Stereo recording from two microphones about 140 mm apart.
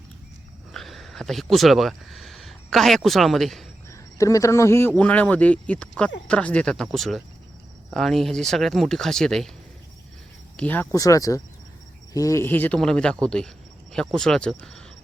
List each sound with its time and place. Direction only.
0.7 s speech: centre (ahead or behind)
3.8 s speech: 20° left (ahead or behind); by 9.5 s 5° left (ahead or behind)
10.6 s speech: 10° left (ahead or behind)
10.9 s speech: 25° left (ahead or behind); by 14.8 s 5° left (ahead or behind)